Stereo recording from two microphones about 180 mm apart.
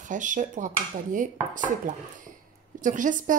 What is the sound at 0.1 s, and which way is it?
Speech, 45° right (ahead or behind).